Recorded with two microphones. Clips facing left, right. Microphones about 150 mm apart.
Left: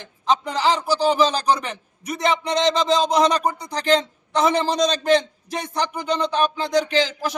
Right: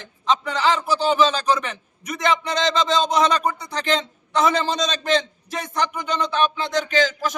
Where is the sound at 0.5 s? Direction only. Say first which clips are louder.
Even; 35° left (ahead or behind).